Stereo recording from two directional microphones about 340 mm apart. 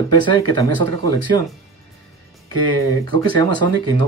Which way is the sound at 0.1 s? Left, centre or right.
Centre.